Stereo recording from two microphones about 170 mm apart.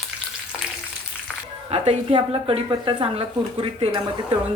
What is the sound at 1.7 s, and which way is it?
Speech, 40° right (ahead or behind).